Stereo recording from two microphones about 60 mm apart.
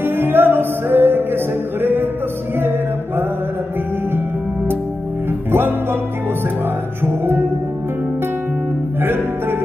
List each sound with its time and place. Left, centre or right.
0.0 s music: right
5.5 s music: right
7.1 s music: right
9.0 s music: right